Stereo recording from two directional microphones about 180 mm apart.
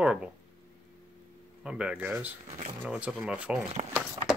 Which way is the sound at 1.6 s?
5° right (ahead or behind).